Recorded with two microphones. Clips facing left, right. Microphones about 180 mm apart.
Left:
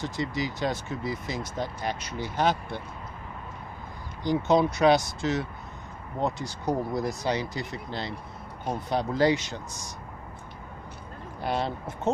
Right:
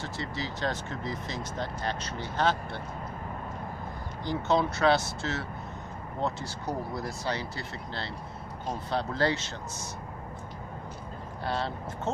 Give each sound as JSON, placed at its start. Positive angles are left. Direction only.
{"t": 0.0, "sound": "speech", "side_deg": 15}
{"t": 4.2, "sound": "speech", "side_deg": 15}
{"t": 11.4, "sound": "speech", "side_deg": 15}